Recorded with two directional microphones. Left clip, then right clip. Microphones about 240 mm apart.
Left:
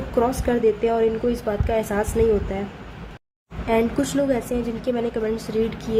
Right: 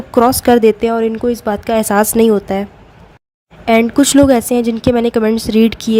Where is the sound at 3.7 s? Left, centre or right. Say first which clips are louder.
Right 10 dB; right.